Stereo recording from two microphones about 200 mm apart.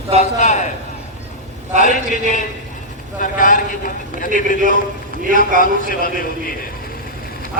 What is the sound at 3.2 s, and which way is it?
A man's voice, 40° left (ahead or behind).